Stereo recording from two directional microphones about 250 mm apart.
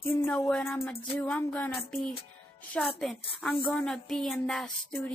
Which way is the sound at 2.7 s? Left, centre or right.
Centre.